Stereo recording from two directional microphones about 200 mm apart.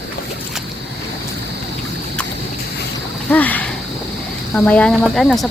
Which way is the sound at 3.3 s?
10° left (ahead or behind).